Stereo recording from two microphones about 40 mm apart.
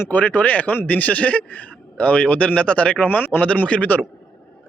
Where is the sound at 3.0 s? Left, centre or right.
Left.